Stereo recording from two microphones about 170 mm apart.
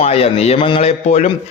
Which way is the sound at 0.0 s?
35° left (ahead or behind).